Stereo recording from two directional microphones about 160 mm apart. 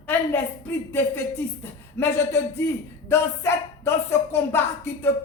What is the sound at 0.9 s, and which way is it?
Speech, 15° left (ahead or behind).